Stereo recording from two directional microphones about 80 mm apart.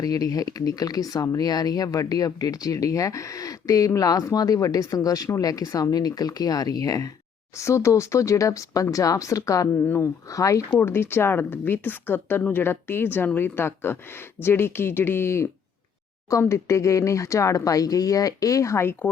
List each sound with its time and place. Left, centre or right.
0.0 s speech: left
9.8 s speech: left
10.2 s speech: left
10.8 s a woman's voice: left